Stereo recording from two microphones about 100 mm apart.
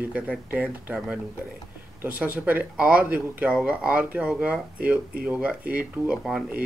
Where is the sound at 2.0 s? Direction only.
15° right (ahead or behind).